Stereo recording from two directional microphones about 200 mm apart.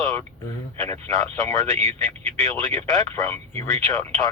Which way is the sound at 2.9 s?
15° left (ahead or behind).